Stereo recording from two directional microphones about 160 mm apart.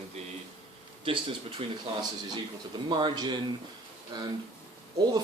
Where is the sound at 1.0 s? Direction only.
35° right (ahead or behind).